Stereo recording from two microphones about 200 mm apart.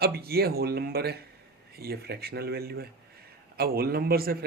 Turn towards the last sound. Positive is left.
turn(degrees=-50)  # may be behind; listen again after turning